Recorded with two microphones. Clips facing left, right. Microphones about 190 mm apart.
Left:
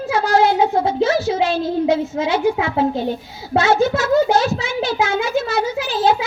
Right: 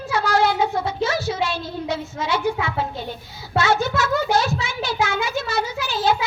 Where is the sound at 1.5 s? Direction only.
45° left (ahead or behind).